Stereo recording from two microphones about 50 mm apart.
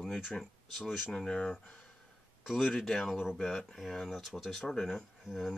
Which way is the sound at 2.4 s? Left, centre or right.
Centre.